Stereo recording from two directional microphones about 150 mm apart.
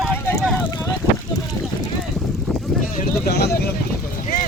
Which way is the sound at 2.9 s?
85° left.